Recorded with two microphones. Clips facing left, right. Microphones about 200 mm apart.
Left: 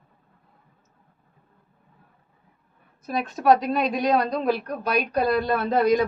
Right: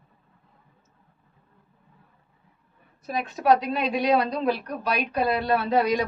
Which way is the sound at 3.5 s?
45° left (ahead or behind).